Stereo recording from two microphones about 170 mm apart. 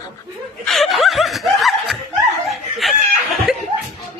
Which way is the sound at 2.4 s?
Centre (ahead or behind).